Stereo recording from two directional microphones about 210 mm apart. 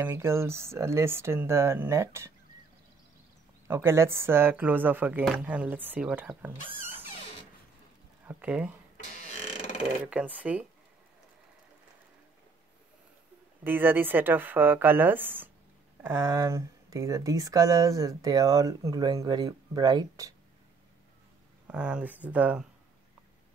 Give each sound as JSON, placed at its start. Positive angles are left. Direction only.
{"t": 0.0, "sound": "speech", "side_deg": -10}
{"t": 3.6, "sound": "speech", "side_deg": -10}
{"t": 8.3, "sound": "speech", "side_deg": -5}
{"t": 8.9, "sound": "a sound", "side_deg": 30}
{"t": 10.0, "sound": "speech", "side_deg": -5}
{"t": 13.7, "sound": "speech", "side_deg": -10}
{"t": 21.6, "sound": "speech", "side_deg": -5}